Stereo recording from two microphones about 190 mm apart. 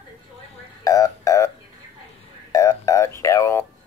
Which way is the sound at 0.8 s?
15° left (ahead or behind).